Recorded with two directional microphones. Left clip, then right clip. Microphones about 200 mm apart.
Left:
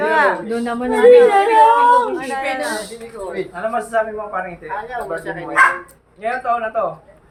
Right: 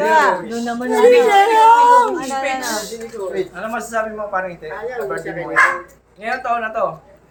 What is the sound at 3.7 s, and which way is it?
A woman's voice, 5° right (ahead or behind).